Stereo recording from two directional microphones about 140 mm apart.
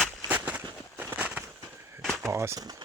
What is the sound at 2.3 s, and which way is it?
Speech, 20° right (ahead or behind).